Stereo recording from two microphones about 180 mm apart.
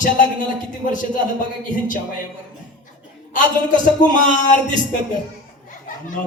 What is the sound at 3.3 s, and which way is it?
A man's voice, 45° left (ahead or behind).